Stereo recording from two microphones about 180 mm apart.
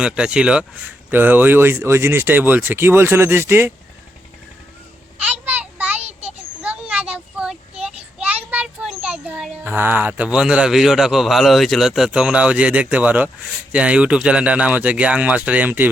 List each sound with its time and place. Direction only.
0.0 s speech: 5° right (ahead or behind)
5.2 s child singing: 10° right (ahead or behind)
6.0 s a sound: 35° right (ahead or behind)
6.6 s a child's voice: 5° right (ahead or behind)